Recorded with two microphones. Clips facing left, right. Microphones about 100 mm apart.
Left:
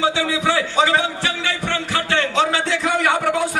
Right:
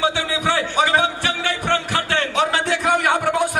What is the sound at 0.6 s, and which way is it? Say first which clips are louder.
Speech: even; 20° right (ahead or behind).